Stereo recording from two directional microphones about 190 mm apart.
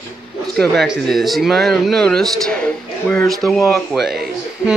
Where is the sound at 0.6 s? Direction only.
Centre (ahead or behind).